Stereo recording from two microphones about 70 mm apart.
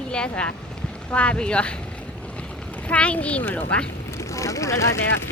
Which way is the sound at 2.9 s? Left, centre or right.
Centre.